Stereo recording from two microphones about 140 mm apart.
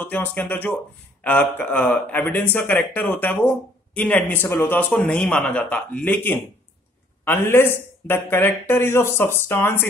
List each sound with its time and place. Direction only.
0.0 s speech: 10° left (ahead or behind)